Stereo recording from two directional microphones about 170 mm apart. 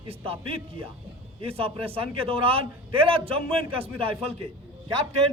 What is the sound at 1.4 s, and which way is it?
A man's voice, 35° right (ahead or behind).